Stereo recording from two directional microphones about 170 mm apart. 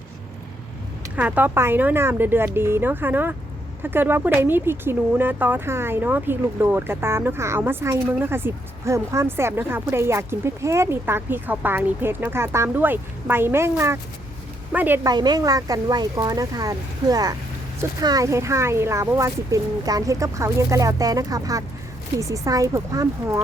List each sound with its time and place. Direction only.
1.1 s speech: 10° right (ahead or behind)
15.1 s speech: 25° right (ahead or behind)